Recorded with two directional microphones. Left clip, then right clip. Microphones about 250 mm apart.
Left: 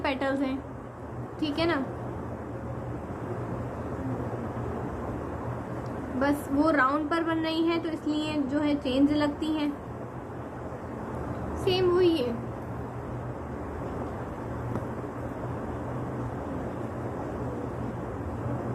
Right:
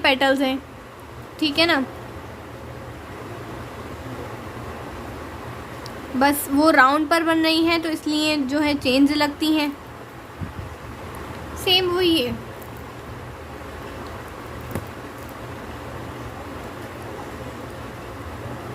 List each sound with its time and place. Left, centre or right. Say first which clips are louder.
0.0 s a woman's voice: right 10 dB; right
6.1 s a woman's voice: right 8 dB; right
11.6 s a woman's voice: right 5 dB; right